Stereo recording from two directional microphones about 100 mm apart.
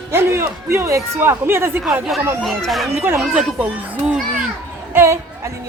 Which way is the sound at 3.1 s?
Centre (ahead or behind).